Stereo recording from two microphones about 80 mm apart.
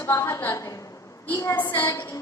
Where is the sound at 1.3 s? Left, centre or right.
Left.